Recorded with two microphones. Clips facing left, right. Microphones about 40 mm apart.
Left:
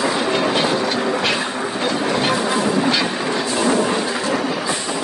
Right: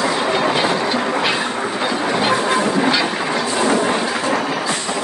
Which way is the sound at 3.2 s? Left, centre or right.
Right.